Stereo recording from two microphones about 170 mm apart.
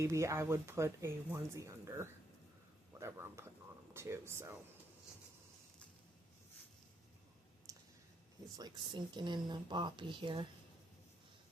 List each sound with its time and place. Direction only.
0.0 s speech: 20° right (ahead or behind)
7.7 s clicking: 20° right (ahead or behind)
8.5 s speech: 25° right (ahead or behind)